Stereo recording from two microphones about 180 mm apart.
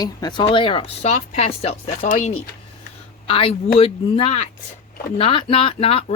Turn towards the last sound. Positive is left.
turn(degrees=30)  # may be behind; listen again after turning